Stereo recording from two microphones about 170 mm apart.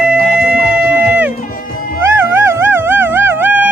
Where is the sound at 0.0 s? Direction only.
5° right (ahead or behind).